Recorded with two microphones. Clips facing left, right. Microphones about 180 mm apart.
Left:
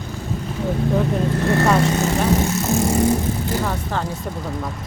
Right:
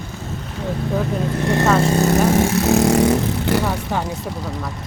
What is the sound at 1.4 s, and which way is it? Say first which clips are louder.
Vehicle: even; 15° right (ahead or behind).